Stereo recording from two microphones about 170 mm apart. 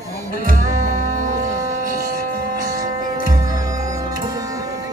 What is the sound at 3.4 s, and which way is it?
Music, 20° right (ahead or behind).